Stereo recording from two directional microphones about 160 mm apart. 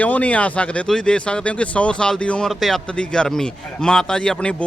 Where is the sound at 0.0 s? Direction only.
10° left (ahead or behind).